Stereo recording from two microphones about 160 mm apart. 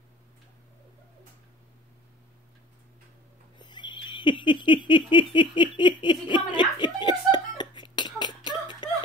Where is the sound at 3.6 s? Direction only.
30° left (ahead or behind).